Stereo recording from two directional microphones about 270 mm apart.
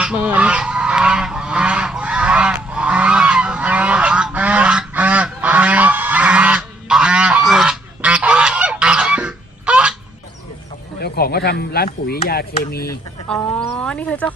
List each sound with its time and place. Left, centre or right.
0.0 s goose: centre
11.0 s a sound: left
12.0 s speech: left
13.2 s speech: centre